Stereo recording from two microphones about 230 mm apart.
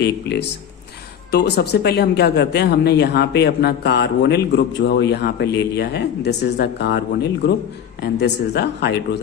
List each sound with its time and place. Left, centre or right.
0.0 s speech: left